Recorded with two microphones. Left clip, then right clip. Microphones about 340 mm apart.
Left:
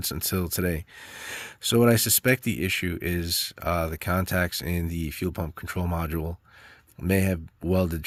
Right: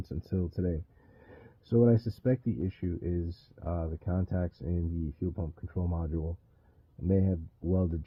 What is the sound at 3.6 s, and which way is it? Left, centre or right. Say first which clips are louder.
Speech: left 11 dB; left.